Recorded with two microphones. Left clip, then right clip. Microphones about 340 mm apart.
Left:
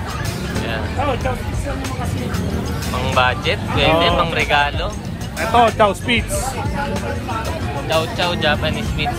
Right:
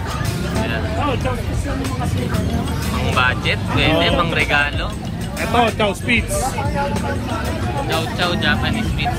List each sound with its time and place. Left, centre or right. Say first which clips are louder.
3.1 s speech: left 1 dB; centre
7.9 s speech: left 3 dB; centre